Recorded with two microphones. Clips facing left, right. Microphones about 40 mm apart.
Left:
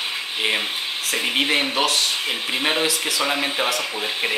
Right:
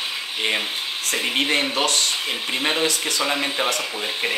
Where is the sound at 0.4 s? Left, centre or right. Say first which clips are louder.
Left 1 dB; centre.